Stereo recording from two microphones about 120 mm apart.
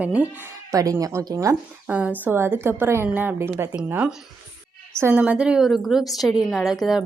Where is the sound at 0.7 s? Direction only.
30° right (ahead or behind).